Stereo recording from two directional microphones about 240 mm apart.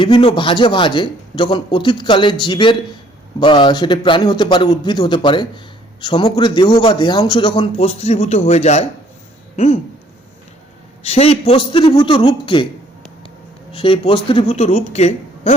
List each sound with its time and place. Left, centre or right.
0.0 s a man's voice: left
11.0 s a man's voice: left
13.7 s a man's voice: left